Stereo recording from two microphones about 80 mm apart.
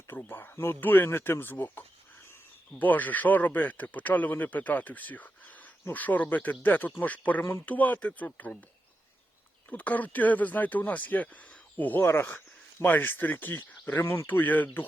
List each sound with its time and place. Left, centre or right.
0.1 s speech: left
9.6 s speech: centre